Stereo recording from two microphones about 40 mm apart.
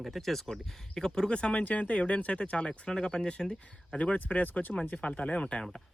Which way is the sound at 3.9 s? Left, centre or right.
Left.